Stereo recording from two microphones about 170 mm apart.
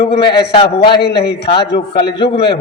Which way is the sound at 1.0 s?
70° left (ahead or behind).